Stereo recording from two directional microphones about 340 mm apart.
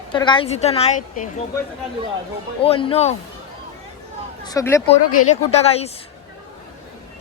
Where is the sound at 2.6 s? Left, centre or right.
Centre.